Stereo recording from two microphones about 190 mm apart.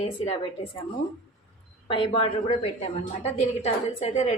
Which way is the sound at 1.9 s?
25° left (ahead or behind).